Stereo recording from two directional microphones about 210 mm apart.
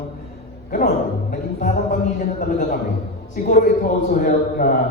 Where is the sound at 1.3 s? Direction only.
40° left (ahead or behind).